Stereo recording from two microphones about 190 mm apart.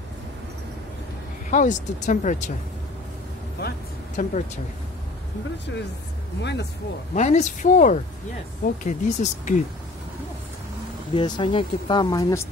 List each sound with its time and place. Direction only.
1.5 s speech: 40° left (ahead or behind)
4.2 s speech: 45° left (ahead or behind)
6.4 s speech: 65° left (ahead or behind)
7.2 s speech: 40° left (ahead or behind)
11.1 s speech: 25° left (ahead or behind)